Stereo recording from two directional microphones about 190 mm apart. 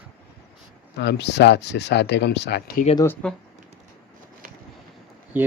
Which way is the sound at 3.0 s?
10° left (ahead or behind).